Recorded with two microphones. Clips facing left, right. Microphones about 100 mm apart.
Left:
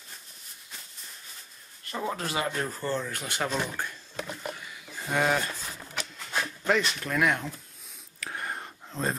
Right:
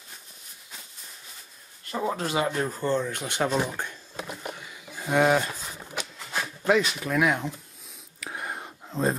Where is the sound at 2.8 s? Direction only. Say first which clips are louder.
Right 5 dB; 20° right (ahead or behind).